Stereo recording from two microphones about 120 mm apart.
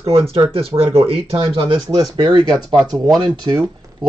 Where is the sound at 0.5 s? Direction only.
50° right (ahead or behind).